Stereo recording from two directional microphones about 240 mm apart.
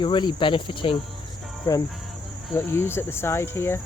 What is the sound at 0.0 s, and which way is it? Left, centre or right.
Cricket, centre.